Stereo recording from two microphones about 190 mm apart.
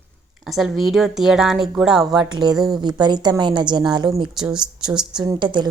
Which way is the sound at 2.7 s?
25° right (ahead or behind).